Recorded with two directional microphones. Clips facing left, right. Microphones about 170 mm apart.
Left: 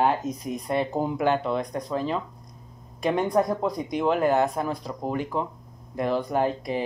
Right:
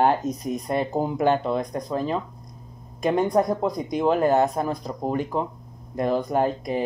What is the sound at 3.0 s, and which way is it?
Speech, 15° right (ahead or behind).